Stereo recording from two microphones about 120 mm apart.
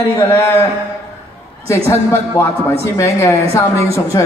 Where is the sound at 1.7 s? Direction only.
25° left (ahead or behind).